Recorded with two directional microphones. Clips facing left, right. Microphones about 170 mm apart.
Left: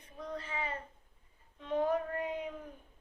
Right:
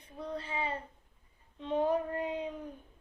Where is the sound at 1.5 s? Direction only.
30° right (ahead or behind).